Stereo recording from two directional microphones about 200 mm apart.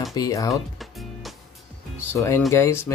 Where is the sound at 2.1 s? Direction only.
15° left (ahead or behind).